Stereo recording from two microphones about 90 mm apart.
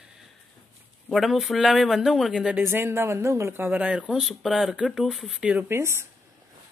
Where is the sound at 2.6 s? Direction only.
25° right (ahead or behind).